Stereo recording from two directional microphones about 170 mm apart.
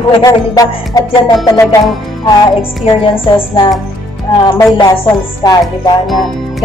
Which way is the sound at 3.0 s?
30° left (ahead or behind).